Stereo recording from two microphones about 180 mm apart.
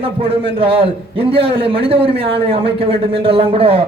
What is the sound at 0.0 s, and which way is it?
A man's voice, 30° right (ahead or behind).